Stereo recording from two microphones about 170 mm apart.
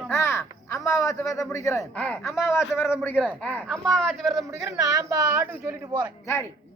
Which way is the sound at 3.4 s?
10° left (ahead or behind).